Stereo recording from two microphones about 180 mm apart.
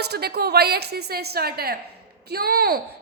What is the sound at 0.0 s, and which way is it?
A woman's voice, 60° right (ahead or behind).